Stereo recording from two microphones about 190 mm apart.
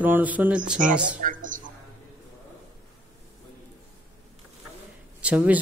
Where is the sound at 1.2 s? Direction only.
45° right (ahead or behind).